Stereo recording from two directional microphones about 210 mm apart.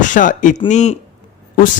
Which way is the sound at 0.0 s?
40° left (ahead or behind).